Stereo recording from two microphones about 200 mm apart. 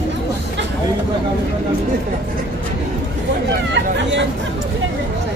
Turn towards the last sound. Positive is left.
turn(degrees=-60)  # may be behind; listen again after turning